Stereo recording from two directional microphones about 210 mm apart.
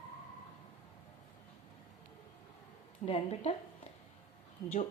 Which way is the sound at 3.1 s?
25° left (ahead or behind).